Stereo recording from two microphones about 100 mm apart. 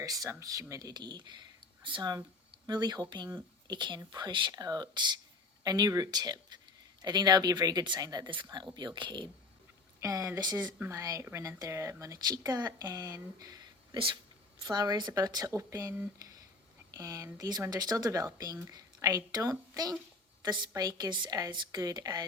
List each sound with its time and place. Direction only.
0.0 s a woman's voice: 35° right (ahead or behind)
8.3 s speech: 50° right (ahead or behind)
10.0 s a woman's voice: 35° right (ahead or behind)
10.8 s a woman's voice: 30° right (ahead or behind)
13.9 s speech: 55° right (ahead or behind)
14.6 s a woman's voice: 40° right (ahead or behind)